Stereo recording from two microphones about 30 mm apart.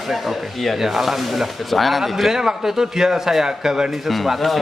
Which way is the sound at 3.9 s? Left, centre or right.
Centre.